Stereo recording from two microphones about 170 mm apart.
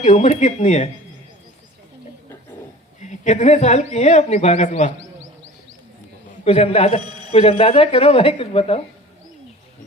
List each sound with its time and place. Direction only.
0.0 s speech: 40° left (ahead or behind)
3.0 s speech: 40° left (ahead or behind)
6.4 s speech: 35° left (ahead or behind)